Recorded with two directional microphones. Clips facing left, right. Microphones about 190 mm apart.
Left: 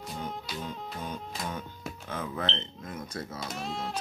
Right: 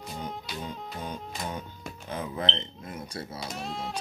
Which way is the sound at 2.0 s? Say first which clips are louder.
Right 2 dB; 15° right (ahead or behind).